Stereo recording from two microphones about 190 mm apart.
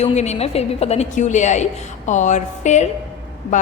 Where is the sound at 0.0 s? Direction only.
35° left (ahead or behind).